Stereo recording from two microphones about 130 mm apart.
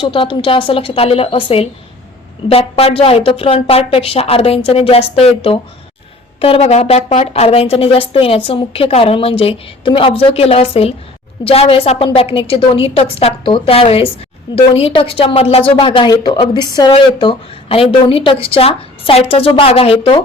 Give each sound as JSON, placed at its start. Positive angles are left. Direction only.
{"t": 0.0, "sound": "a woman's voice", "side_deg": 40}